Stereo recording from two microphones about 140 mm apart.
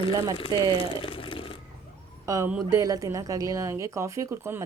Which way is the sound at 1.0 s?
40° left (ahead or behind).